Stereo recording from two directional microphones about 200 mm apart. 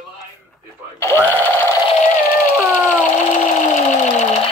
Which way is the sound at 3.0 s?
40° left (ahead or behind).